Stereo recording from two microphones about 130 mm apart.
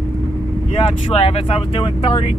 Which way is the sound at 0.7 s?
50° left (ahead or behind).